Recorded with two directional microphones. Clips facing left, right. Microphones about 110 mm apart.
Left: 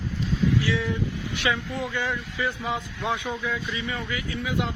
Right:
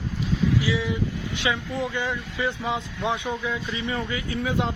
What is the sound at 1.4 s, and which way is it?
A man's voice, 20° right (ahead or behind).